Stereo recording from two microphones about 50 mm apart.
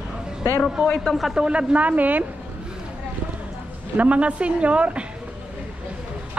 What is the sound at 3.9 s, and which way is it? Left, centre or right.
A woman's voice, right.